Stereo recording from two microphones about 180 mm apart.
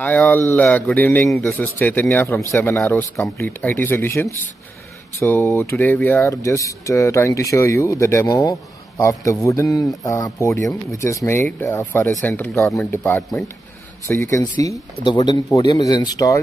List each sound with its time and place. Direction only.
0.0 s speech: 10° left (ahead or behind)
14.6 s speech: 20° left (ahead or behind)